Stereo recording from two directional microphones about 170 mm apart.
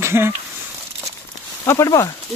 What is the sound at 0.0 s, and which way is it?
Speech, 15° right (ahead or behind).